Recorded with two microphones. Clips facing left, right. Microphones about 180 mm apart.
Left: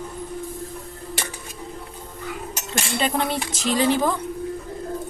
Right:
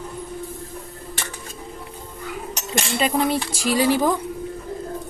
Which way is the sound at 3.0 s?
Centre (ahead or behind).